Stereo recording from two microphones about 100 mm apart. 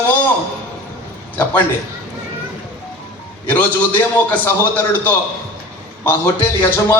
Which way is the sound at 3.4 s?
15° left (ahead or behind).